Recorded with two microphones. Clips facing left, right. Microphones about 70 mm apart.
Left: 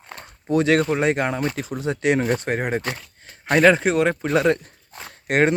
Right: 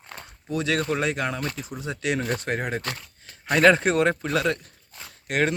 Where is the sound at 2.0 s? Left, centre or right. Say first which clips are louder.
Left 6 dB; left.